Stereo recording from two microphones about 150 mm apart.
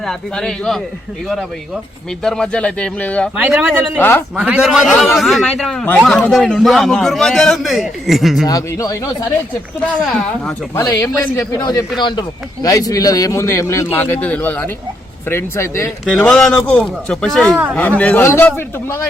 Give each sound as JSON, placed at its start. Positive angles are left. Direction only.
{"t": 0.0, "sound": "a man's voice", "side_deg": 5}
{"t": 3.3, "sound": "a man's voice", "side_deg": -10}
{"t": 3.9, "sound": "a man's voice", "side_deg": 15}
{"t": 4.4, "sound": "a man's voice", "side_deg": -10}
{"t": 8.4, "sound": "a man's voice", "side_deg": 25}
{"t": 9.8, "sound": "a man's voice", "side_deg": 5}
{"t": 10.8, "sound": "a man's voice", "side_deg": 20}
{"t": 16.0, "sound": "a man's voice", "side_deg": 5}